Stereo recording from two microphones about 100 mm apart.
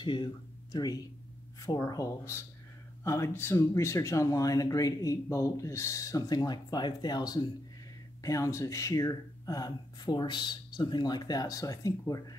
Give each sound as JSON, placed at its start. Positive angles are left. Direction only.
{"t": 0.0, "sound": "speech", "side_deg": 50}